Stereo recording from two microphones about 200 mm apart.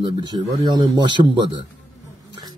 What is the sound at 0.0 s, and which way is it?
A man's voice, 20° right (ahead or behind).